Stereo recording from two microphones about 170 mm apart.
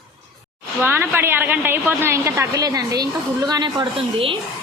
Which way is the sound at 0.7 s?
15° right (ahead or behind).